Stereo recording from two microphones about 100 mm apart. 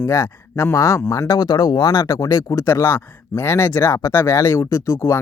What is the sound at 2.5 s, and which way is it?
Speech, 25° left (ahead or behind).